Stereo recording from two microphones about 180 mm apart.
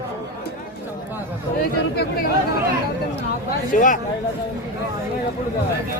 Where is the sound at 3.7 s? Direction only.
45° left (ahead or behind).